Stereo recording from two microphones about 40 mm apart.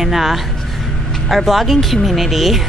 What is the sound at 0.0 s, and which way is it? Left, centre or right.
Speech, centre.